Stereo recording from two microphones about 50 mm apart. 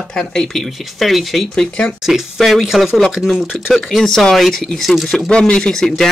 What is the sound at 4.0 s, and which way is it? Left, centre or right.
Speech, centre.